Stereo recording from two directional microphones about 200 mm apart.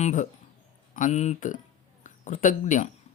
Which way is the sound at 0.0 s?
40° left (ahead or behind).